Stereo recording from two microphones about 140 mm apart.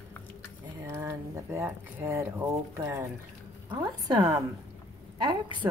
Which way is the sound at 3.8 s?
30° right (ahead or behind).